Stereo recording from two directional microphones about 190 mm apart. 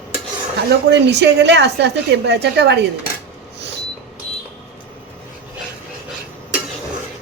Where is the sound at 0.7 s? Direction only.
65° right (ahead or behind).